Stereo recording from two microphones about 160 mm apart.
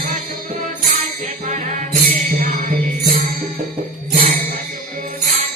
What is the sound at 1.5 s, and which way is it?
Music, 50° right (ahead or behind).